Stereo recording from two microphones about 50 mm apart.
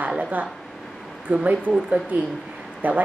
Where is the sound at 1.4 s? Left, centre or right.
Right.